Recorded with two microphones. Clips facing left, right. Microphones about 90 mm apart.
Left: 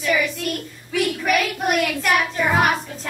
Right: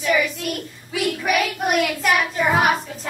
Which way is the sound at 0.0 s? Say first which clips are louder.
Right 1 dB; 5° right (ahead or behind).